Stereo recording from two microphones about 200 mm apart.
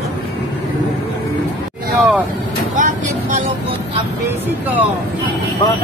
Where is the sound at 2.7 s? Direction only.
40° right (ahead or behind).